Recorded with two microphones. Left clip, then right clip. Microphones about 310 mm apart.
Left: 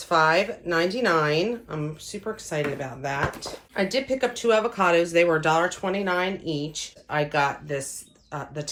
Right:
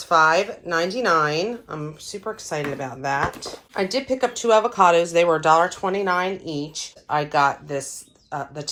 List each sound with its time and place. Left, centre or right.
0.1 s speech: centre